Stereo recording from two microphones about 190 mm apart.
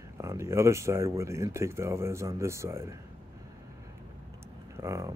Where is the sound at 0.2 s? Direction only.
15° right (ahead or behind).